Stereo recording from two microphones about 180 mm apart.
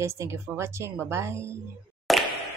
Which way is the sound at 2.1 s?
Centre (ahead or behind).